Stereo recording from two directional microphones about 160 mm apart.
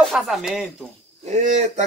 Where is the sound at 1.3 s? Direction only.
50° right (ahead or behind).